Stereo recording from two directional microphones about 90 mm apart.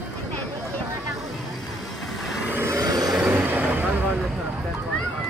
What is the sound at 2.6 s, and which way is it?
Vehicle, 35° right (ahead or behind).